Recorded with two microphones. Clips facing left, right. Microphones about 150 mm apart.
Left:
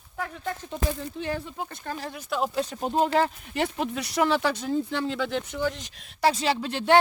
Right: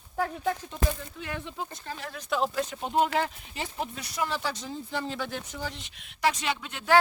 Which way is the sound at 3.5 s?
75° left (ahead or behind).